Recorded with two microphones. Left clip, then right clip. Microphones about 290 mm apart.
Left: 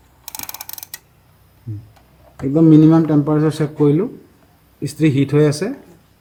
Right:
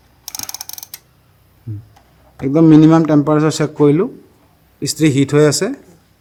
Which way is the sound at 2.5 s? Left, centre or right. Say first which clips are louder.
Right 2 dB; right.